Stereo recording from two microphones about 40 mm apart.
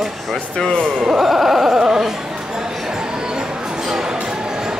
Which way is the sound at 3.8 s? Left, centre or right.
Centre.